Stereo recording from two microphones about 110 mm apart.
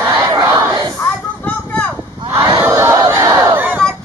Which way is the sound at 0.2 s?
25° right (ahead or behind).